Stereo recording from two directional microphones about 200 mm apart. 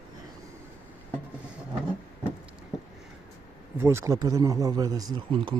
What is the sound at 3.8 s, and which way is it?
Speech, 15° right (ahead or behind).